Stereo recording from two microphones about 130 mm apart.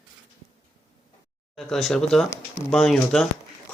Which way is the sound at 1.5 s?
Centre (ahead or behind).